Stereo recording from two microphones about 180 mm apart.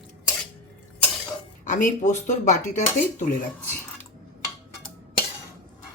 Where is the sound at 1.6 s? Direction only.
45° left (ahead or behind).